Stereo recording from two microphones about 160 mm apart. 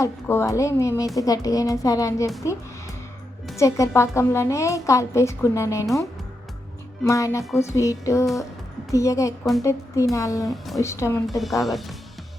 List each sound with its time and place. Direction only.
0.0 s a woman's voice: 15° left (ahead or behind)
3.6 s a woman's voice: 20° left (ahead or behind)
11.3 s speech: centre (ahead or behind)